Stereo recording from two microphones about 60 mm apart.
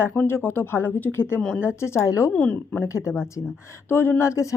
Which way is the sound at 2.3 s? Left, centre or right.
Left.